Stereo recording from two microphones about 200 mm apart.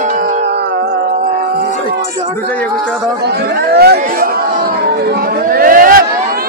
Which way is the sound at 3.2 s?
55° right (ahead or behind).